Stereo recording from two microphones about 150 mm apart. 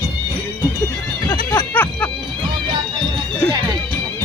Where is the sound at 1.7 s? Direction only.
10° left (ahead or behind).